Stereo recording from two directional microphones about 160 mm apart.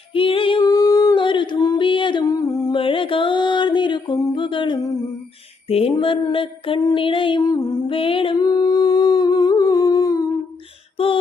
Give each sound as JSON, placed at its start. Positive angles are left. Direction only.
{"t": 0.1, "sound": "singing", "side_deg": 35}
{"t": 0.6, "sound": "a sound", "side_deg": 20}
{"t": 2.7, "sound": "music", "side_deg": 35}
{"t": 5.6, "sound": "female singing", "side_deg": 40}
{"t": 5.9, "sound": "music", "side_deg": 35}
{"t": 10.9, "sound": "a sound", "side_deg": 35}